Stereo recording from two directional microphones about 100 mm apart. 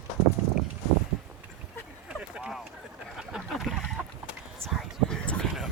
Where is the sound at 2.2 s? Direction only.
10° right (ahead or behind).